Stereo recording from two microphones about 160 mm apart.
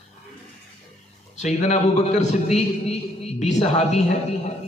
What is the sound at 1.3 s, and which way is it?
A man's voice, 45° left (ahead or behind).